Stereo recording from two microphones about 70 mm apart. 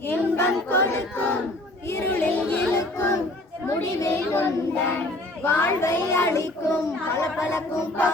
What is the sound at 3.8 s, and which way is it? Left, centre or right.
Child singing, left.